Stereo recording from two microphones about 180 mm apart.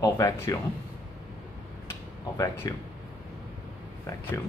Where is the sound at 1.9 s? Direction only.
15° left (ahead or behind).